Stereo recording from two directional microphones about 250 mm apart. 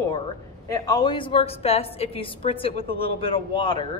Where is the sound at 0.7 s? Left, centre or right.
Centre.